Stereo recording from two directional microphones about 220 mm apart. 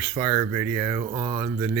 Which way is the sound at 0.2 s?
20° right (ahead or behind).